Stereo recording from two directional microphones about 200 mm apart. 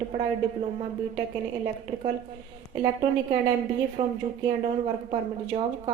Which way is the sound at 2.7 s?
25° right (ahead or behind).